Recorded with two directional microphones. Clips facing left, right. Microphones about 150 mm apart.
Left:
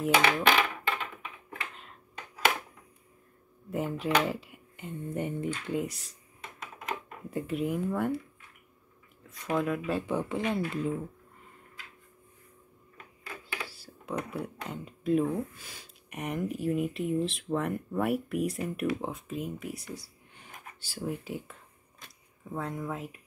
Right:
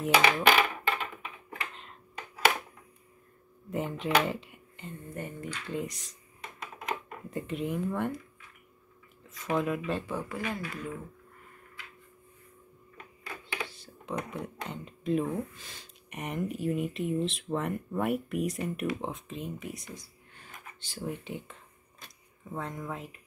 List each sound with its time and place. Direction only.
0.0 s dishes: 5° right (ahead or behind)
3.7 s a sound: 5° left (ahead or behind)
4.1 s speech: centre (ahead or behind)
4.8 s speech: 20° left (ahead or behind)
5.7 s speech: 10° left (ahead or behind)
7.2 s speech: 5° left (ahead or behind)
9.3 s speech: centre (ahead or behind)
10.0 s speech: 20° left (ahead or behind)
13.7 s speech: 5° left (ahead or behind)
19.9 s a sound: 15° left (ahead or behind)
22.5 s speech: 5° left (ahead or behind)